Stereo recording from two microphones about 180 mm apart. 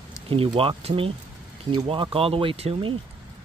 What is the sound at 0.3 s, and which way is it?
Speech, 30° right (ahead or behind).